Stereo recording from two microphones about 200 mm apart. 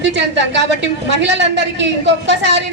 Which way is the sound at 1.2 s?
60° right (ahead or behind).